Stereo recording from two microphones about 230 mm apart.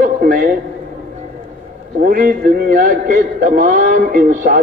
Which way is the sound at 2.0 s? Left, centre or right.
Right.